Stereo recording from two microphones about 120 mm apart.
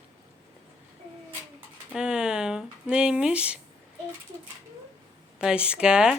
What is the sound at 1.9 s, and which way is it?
Speech, 5° right (ahead or behind).